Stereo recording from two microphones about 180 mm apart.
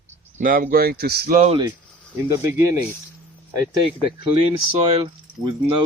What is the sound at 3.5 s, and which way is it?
Speech, 20° right (ahead or behind).